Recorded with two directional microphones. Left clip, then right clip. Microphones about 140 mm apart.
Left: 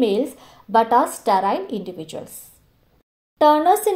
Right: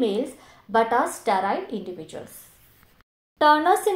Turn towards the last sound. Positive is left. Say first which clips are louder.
# left 3 dB
turn(degrees=15)  # may be behind; listen again after turning